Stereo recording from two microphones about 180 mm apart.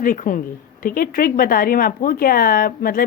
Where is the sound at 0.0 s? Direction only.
50° left (ahead or behind).